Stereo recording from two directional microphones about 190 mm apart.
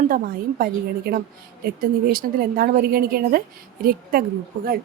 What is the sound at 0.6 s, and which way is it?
A woman's voice, 50° right (ahead or behind).